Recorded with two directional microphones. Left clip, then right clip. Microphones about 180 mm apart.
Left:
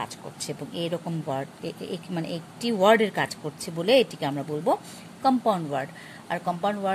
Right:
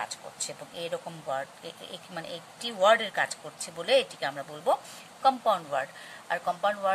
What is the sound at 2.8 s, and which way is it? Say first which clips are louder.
A woman's voice: left 3 dB; 20° left (ahead or behind).